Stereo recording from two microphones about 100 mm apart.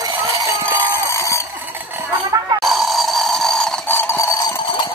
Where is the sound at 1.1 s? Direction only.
30° left (ahead or behind).